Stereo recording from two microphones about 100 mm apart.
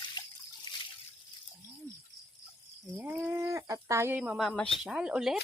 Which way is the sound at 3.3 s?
30° right (ahead or behind).